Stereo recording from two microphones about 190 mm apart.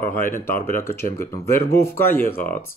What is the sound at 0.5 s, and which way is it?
Speech, 10° left (ahead or behind).